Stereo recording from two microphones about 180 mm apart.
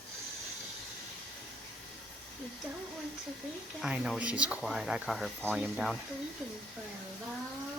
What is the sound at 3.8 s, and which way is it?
Speech, 5° right (ahead or behind).